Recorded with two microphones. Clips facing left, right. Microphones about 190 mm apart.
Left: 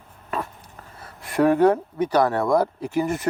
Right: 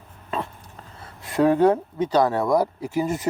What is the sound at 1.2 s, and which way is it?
Speech, 20° right (ahead or behind).